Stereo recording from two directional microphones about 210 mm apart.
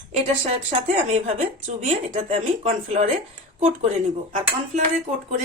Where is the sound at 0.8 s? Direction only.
30° right (ahead or behind).